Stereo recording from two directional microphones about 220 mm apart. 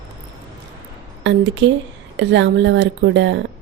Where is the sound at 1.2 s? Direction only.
60° right (ahead or behind).